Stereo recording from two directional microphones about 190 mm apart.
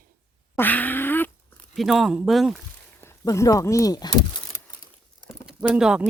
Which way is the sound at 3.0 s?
15° left (ahead or behind).